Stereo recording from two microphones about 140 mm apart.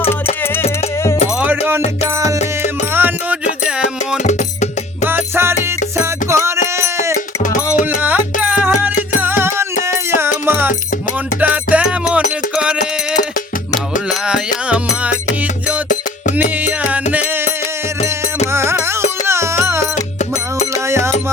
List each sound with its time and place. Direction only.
1.4 s music: 10° right (ahead or behind)
2.9 s music: 15° right (ahead or behind)
4.2 s music: 60° left (ahead or behind)
5.0 s music: 15° right (ahead or behind)
6.2 s a sound: 20° right (ahead or behind)
8.0 s music: 10° right (ahead or behind)
14.1 s music: 5° right (ahead or behind)
16.4 s music: 10° right (ahead or behind)
18.5 s music: 20° right (ahead or behind)
20.8 s music: 20° right (ahead or behind)